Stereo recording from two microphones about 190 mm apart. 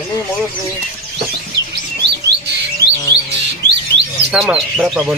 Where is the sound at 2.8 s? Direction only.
60° right (ahead or behind).